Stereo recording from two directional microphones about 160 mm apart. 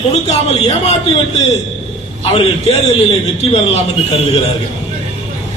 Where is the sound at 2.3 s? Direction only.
40° left (ahead or behind).